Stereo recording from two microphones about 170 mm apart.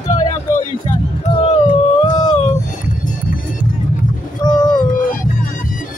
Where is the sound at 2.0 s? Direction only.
25° left (ahead or behind).